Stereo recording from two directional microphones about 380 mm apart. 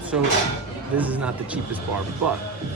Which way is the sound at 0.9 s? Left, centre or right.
Centre.